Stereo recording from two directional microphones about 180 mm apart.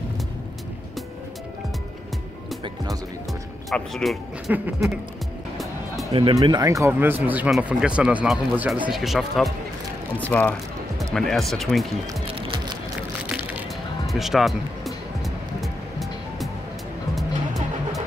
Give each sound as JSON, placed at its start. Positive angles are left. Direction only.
{"t": 2.6, "sound": "music", "side_deg": -20}
{"t": 3.7, "sound": "speech", "side_deg": 0}
{"t": 6.3, "sound": "speech", "side_deg": -20}
{"t": 12.4, "sound": "music", "side_deg": -30}
{"t": 14.0, "sound": "music", "side_deg": 0}